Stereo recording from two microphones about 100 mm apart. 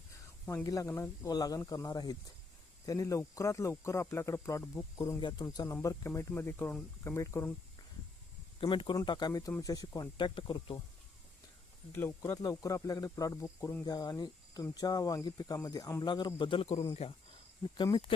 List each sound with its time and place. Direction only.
0.6 s speech: 35° left (ahead or behind)
8.6 s speech: 55° left (ahead or behind)
9.0 s speech: 45° left (ahead or behind)
11.9 s speech: 25° left (ahead or behind)
13.8 s speech: 40° left (ahead or behind)
16.0 s speech: 45° left (ahead or behind); by 16.8 s 80° left
16.9 s speech: 90° left